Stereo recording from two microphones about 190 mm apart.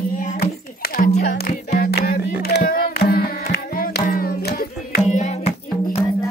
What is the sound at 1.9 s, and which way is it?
Music, 60° left (ahead or behind).